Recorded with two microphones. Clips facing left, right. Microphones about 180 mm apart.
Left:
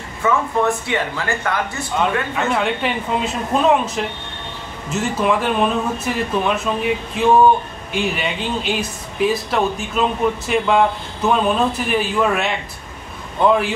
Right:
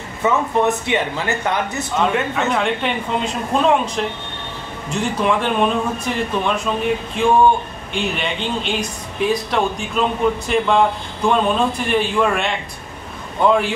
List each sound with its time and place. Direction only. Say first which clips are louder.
0.2 s speech: right 1 dB; 20° right (ahead or behind)
2.3 s speech: even; centre (ahead or behind)